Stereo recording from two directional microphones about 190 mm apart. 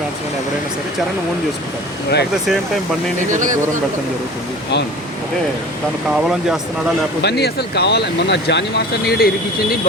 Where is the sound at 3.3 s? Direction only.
40° right (ahead or behind).